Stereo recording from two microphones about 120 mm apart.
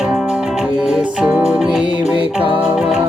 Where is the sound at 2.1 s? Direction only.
45° right (ahead or behind).